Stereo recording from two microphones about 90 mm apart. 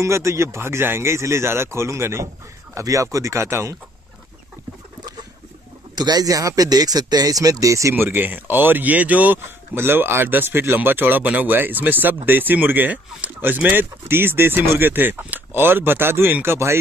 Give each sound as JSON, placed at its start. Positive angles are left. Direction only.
{"t": 0.0, "sound": "speech", "side_deg": -35}
{"t": 5.9, "sound": "speech", "side_deg": -50}
{"t": 7.9, "sound": "speech", "side_deg": -25}